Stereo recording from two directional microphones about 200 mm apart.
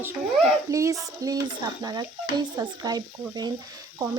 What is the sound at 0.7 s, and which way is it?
Speech, 15° right (ahead or behind).